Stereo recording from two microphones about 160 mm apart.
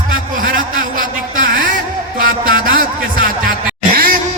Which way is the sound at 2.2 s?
65° right (ahead or behind).